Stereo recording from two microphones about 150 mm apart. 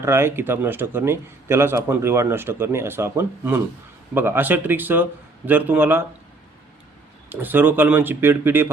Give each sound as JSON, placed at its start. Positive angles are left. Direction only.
{"t": 0.0, "sound": "a man's voice", "side_deg": -15}
{"t": 7.3, "sound": "a man's voice", "side_deg": -15}